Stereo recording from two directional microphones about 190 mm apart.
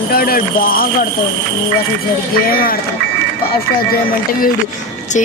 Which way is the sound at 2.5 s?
50° left (ahead or behind).